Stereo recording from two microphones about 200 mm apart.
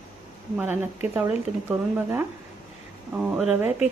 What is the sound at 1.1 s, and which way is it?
Speech, 10° right (ahead or behind).